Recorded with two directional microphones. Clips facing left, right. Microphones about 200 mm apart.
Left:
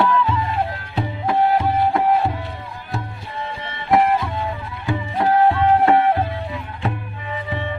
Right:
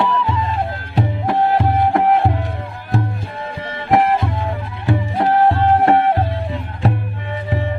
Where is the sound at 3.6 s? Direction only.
45° right (ahead or behind).